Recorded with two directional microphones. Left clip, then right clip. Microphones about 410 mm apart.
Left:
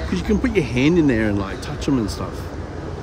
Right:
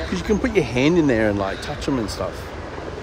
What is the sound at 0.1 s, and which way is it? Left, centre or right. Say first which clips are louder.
Speech: even; centre.